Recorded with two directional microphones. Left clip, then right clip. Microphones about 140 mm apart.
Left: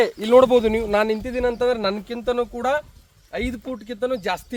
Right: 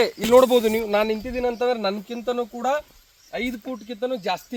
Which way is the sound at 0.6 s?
Centre (ahead or behind).